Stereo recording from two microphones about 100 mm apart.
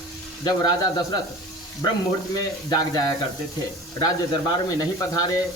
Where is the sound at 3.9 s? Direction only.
40° left (ahead or behind).